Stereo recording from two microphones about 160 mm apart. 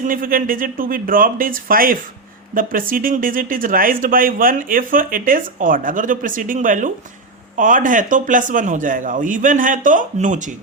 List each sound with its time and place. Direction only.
0.0 s speech: 60° right (ahead or behind)